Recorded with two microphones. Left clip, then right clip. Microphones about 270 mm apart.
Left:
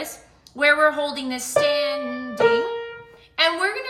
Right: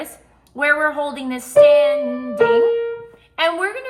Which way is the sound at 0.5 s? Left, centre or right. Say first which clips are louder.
Even; centre.